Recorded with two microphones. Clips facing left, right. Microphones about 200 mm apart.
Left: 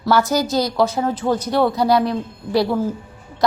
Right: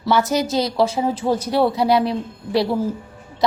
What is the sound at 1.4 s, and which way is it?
Speech, 5° right (ahead or behind).